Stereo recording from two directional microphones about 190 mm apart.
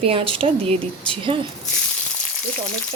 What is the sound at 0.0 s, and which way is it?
Speech, 30° right (ahead or behind).